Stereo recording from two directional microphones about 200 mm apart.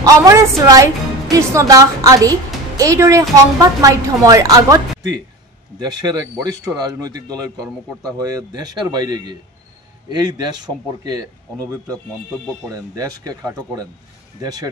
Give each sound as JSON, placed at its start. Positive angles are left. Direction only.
{"t": 0.0, "sound": "a woman's voice", "side_deg": -15}